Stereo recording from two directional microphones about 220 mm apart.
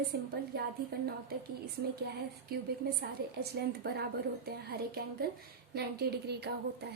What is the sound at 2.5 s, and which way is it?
A woman's voice, 45° right (ahead or behind).